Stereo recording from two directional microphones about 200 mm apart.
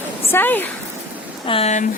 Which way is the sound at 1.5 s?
30° left (ahead or behind).